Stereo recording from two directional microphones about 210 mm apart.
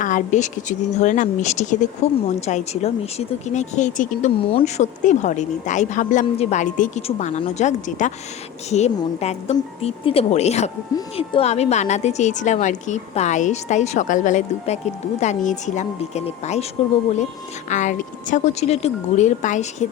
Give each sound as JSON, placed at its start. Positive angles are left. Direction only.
{"t": 0.0, "sound": "speech", "side_deg": 35}
{"t": 17.7, "sound": "speech", "side_deg": 35}